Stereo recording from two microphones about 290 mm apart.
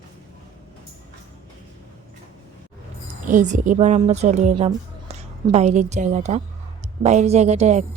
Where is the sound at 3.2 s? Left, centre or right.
Right.